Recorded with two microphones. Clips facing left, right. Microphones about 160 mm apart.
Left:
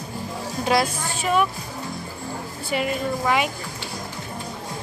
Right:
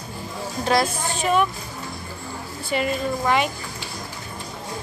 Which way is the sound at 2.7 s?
5° left (ahead or behind).